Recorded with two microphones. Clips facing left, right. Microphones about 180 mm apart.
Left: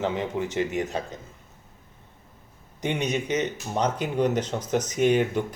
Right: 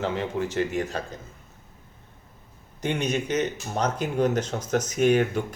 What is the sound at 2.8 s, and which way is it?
Speech, 15° left (ahead or behind).